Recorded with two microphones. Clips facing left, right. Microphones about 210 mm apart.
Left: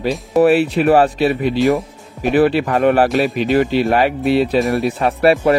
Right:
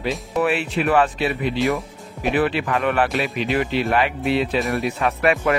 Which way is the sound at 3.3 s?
40° left (ahead or behind).